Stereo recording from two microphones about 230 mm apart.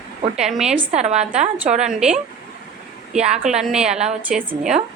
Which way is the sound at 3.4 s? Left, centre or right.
Centre.